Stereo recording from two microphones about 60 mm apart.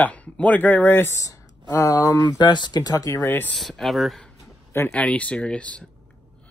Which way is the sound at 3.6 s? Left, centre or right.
Centre.